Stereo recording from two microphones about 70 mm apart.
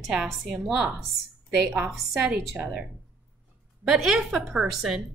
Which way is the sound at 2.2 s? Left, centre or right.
Centre.